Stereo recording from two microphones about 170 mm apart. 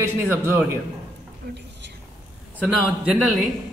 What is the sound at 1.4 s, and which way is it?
Speech, 70° right (ahead or behind).